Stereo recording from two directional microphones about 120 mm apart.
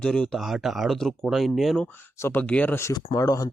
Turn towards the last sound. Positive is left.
turn(degrees=30)  # may be behind; listen again after turning